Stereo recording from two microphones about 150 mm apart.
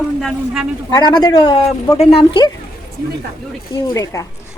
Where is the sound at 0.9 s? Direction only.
30° left (ahead or behind).